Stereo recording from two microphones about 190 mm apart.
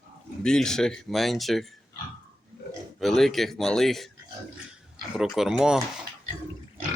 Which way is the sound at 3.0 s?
Centre (ahead or behind).